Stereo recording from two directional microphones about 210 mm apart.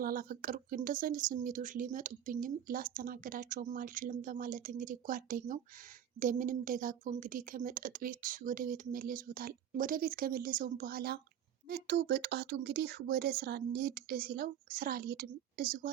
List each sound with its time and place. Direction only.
0.0 s speech: 45° right (ahead or behind)